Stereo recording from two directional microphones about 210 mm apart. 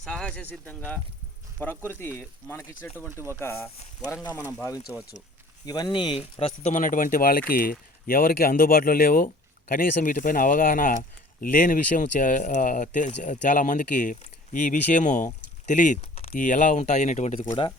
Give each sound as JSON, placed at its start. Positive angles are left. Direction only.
{"t": 0.0, "sound": "speech", "side_deg": 5}
{"t": 1.9, "sound": "speech", "side_deg": 10}
{"t": 4.3, "sound": "speech", "side_deg": -10}
{"t": 5.6, "sound": "speech", "side_deg": 20}
{"t": 15.6, "sound": "a sound", "side_deg": 35}
{"t": 16.3, "sound": "speech", "side_deg": 40}
{"t": 17.4, "sound": "speech", "side_deg": 15}